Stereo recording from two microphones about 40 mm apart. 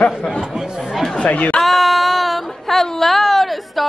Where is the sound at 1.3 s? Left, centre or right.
Left.